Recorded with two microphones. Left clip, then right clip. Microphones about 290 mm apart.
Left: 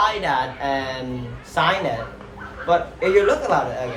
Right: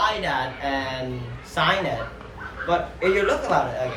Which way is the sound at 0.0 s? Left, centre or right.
Centre.